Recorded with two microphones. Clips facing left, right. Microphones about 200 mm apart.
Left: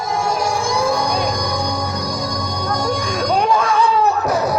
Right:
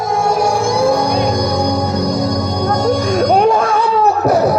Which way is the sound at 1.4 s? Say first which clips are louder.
Right 6 dB; 60° right (ahead or behind).